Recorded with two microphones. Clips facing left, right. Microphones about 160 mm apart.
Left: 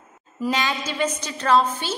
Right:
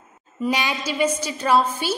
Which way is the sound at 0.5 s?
15° right (ahead or behind).